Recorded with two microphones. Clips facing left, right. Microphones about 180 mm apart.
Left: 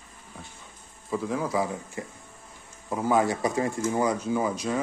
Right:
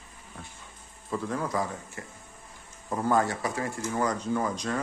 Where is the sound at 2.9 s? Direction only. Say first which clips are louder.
Left 2 dB; 5° left (ahead or behind).